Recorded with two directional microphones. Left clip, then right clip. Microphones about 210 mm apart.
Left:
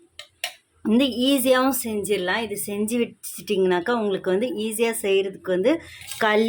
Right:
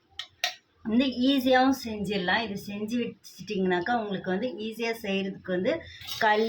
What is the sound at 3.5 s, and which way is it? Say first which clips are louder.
Speech: left 6 dB; 55° left (ahead or behind).